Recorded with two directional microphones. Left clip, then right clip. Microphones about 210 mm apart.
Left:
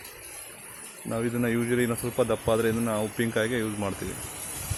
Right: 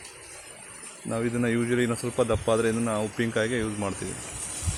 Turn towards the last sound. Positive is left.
turn(degrees=-5)  # may be behind; listen again after turning